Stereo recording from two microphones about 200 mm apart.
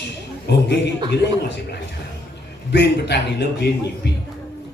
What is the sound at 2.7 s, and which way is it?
A man's voice, 55° left (ahead or behind).